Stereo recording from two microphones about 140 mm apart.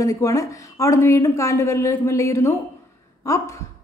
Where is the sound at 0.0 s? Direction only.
20° left (ahead or behind).